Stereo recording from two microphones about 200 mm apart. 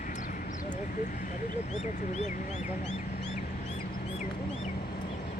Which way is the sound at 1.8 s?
35° left (ahead or behind).